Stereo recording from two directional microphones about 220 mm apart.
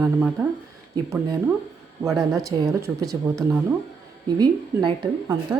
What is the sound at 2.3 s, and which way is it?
A woman's voice, 15° right (ahead or behind).